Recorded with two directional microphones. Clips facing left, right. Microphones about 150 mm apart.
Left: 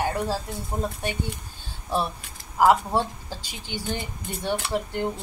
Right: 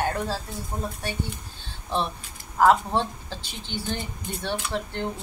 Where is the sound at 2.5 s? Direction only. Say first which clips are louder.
Even; 10° left (ahead or behind).